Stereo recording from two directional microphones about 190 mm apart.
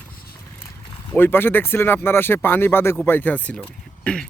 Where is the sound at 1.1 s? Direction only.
10° left (ahead or behind).